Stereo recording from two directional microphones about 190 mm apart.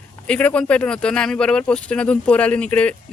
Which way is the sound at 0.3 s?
5° left (ahead or behind).